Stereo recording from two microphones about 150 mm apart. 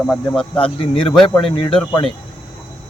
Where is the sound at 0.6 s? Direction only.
35° left (ahead or behind).